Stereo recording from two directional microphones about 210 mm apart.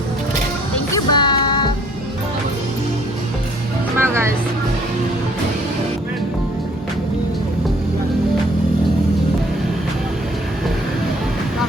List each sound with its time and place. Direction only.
0.9 s music: 20° left (ahead or behind)
3.9 s music: 10° right (ahead or behind)